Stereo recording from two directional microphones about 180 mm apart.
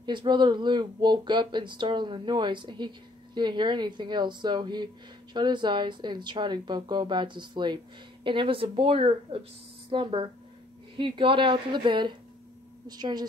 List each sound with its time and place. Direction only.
0.0 s speech: 25° right (ahead or behind)